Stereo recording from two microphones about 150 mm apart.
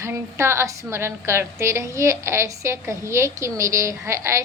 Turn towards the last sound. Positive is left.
turn(degrees=-20)  # may be behind; listen again after turning